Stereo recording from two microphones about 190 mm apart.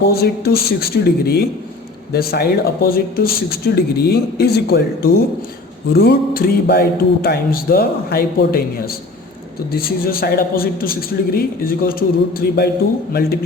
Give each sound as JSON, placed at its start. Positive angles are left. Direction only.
{"t": 0.0, "sound": "a man's voice", "side_deg": 55}
{"t": 9.7, "sound": "a man's voice", "side_deg": 50}